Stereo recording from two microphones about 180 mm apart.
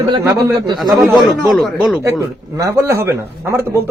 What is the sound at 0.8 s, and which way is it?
Speech, centre (ahead or behind).